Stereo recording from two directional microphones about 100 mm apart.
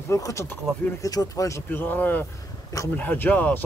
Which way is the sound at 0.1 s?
30° left (ahead or behind).